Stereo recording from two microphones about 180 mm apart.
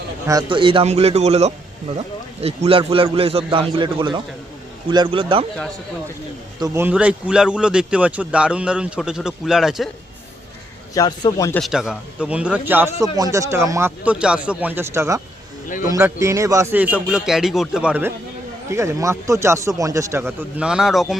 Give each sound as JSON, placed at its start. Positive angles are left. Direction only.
{"t": 0.3, "sound": "a man's voice", "side_deg": -25}
{"t": 6.6, "sound": "speech", "side_deg": -10}
{"t": 10.9, "sound": "a man's voice", "side_deg": 20}
{"t": 11.6, "sound": "a man's voice", "side_deg": -5}